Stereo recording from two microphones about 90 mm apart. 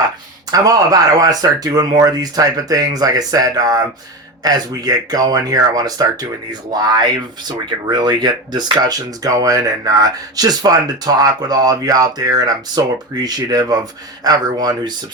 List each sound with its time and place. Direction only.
0.5 s speech: 45° right (ahead or behind)